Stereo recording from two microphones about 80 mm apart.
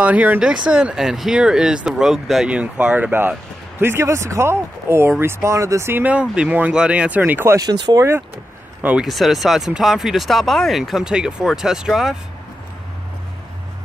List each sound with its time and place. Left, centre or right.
0.0 s speech: centre
2.4 s speech: centre; by 6.0 s right
6.0 s speech: centre
7.5 s speech: right
9.0 s speech: centre